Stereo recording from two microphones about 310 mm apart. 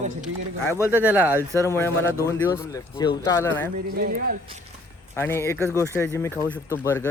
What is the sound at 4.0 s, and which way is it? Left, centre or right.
Speech, right.